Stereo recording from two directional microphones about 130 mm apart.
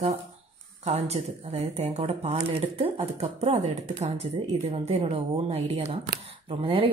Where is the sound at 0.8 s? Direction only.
55° right (ahead or behind).